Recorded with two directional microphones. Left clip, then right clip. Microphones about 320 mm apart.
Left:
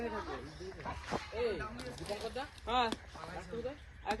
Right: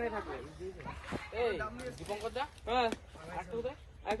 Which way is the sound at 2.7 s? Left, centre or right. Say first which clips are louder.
Right 1 dB; centre.